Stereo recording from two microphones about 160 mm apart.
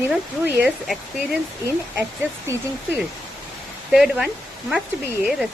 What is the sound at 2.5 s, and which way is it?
Speech, 20° right (ahead or behind).